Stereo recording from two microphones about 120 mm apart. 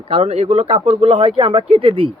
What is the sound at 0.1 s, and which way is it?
Speech, 60° right (ahead or behind).